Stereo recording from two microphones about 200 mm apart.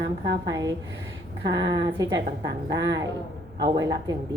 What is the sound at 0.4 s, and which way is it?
A woman's voice, 20° right (ahead or behind).